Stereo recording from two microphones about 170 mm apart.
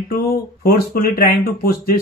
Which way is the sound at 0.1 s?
65° left (ahead or behind).